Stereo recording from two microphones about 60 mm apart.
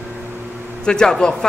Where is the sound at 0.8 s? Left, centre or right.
Centre.